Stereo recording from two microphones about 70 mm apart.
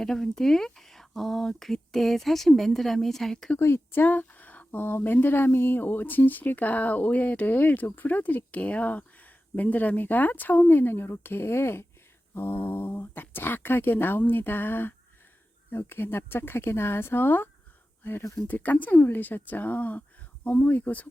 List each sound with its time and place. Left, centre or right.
0.0 s speech: centre
3.6 s a woman's voice: left